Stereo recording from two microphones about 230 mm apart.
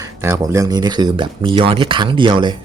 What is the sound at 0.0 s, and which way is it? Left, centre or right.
Speech, centre.